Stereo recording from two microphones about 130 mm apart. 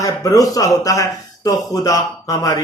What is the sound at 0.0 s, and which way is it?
Speech, 25° left (ahead or behind).